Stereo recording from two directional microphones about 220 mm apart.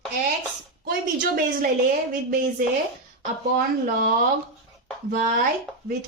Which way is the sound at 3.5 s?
40° right (ahead or behind).